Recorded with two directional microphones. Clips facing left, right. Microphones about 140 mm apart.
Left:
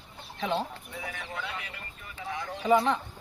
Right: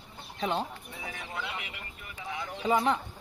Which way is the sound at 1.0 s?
25° right (ahead or behind).